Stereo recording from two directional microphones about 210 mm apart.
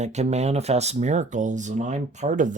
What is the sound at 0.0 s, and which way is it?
Speech, 30° right (ahead or behind).